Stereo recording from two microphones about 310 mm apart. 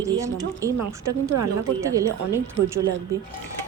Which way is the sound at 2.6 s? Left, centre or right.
Right.